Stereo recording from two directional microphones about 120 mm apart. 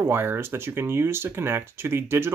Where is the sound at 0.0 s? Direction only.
20° right (ahead or behind).